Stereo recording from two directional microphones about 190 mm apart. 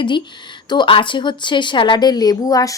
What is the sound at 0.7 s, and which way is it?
A woman's voice, 25° left (ahead or behind).